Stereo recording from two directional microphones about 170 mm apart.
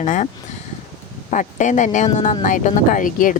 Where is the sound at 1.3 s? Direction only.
45° left (ahead or behind).